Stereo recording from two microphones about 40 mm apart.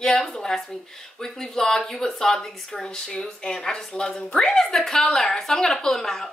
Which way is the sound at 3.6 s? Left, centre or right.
Centre.